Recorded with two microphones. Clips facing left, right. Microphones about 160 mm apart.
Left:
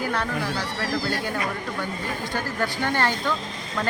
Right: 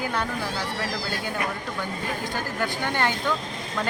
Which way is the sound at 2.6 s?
15° right (ahead or behind).